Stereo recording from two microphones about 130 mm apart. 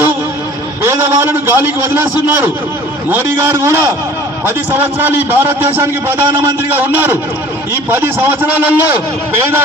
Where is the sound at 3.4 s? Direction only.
20° right (ahead or behind).